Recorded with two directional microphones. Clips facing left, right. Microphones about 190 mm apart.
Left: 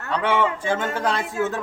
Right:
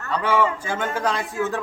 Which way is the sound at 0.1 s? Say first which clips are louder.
Even; centre (ahead or behind).